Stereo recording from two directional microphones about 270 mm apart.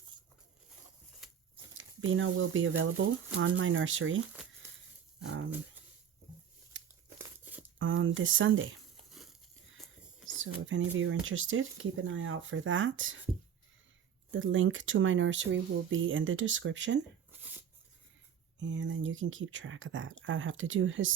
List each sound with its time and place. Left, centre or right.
1.2 s a sound: centre
1.8 s speech: right
4.3 s a sound: centre
5.2 s dog: right
7.8 s speech: right
9.2 s crumpling: centre
10.2 s speech: right
14.3 s speech: right
18.6 s speech: right